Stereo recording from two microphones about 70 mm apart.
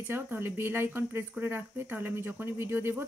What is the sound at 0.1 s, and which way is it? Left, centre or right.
Speech, right.